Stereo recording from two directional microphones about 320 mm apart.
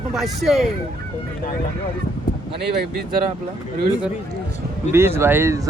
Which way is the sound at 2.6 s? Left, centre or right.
Right.